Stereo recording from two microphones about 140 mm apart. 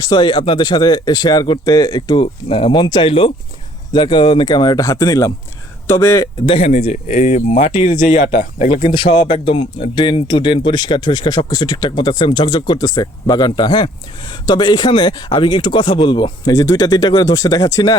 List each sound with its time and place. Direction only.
0.0 s speech: 30° left (ahead or behind)
6.4 s speech: 40° left (ahead or behind); by 8.9 s 60° left (ahead or behind)
8.9 s speech: 40° left (ahead or behind)